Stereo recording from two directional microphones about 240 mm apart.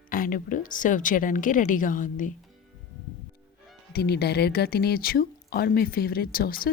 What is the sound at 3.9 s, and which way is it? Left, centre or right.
Speech, left.